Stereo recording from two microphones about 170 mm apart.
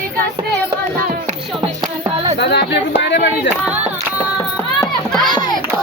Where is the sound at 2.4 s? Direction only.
80° left.